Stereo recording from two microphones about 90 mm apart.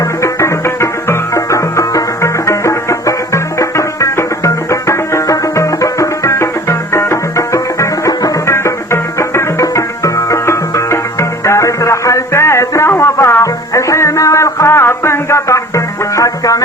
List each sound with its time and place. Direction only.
0.2 s music: 35° left (ahead or behind)